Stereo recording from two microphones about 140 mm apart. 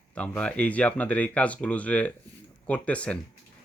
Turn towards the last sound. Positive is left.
turn(degrees=10)  # may be behind; listen again after turning